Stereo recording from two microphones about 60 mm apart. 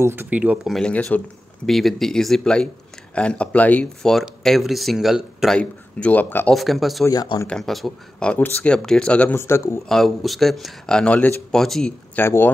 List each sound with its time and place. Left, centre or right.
0.0 s speech: right
0.3 s speech: right
0.8 s speech: centre
1.7 s speech: centre; by 3.8 s left
3.8 s speech: centre
5.6 s speech: left
6.5 s speech: centre
7.1 s speech: left
7.4 s speech: centre
8.2 s speech: centre
9.3 s speech: left
9.8 s speech: centre
10.9 s speech: centre
12.2 s speech: left